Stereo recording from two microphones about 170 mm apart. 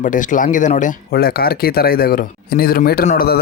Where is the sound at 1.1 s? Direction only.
65° left (ahead or behind).